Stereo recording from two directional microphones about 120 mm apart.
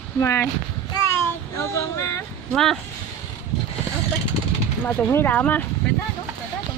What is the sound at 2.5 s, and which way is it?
Speech, 5° left (ahead or behind).